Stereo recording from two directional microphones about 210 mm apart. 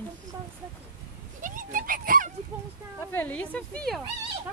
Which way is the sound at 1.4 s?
40° right (ahead or behind).